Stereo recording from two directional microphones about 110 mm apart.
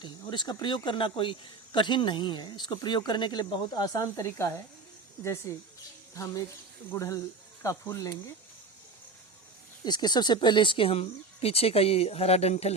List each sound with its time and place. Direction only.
0.0 s speech: 45° left (ahead or behind)
9.8 s speech: 40° left (ahead or behind); by 12.7 s 75° left (ahead or behind)